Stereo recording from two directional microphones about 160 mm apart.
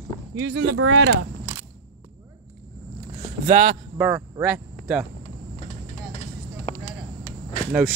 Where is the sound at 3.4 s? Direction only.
55° right (ahead or behind).